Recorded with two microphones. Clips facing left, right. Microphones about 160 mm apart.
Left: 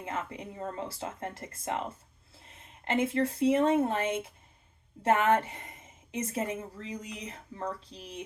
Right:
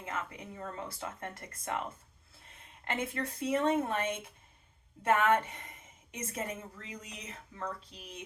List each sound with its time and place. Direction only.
0.0 s a woman's voice: 30° left (ahead or behind)